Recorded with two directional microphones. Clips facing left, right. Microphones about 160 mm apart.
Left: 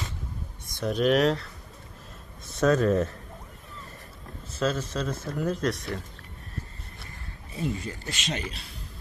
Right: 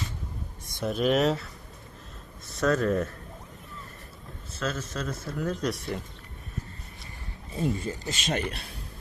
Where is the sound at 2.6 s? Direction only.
20° left (ahead or behind).